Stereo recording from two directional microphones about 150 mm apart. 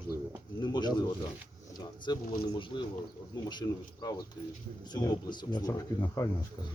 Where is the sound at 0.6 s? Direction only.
30° left (ahead or behind).